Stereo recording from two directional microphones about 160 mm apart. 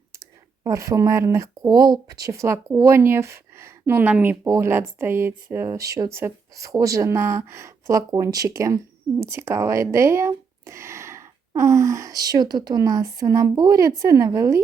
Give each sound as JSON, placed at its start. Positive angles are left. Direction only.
{"t": 0.6, "sound": "speech", "side_deg": -20}